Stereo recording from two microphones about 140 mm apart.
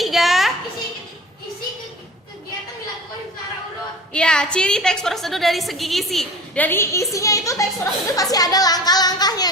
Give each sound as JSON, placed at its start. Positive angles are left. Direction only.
{"t": 0.0, "sound": "a sound", "side_deg": 0}
{"t": 4.1, "sound": "a woman's voice", "side_deg": 5}
{"t": 6.6, "sound": "speech", "side_deg": 15}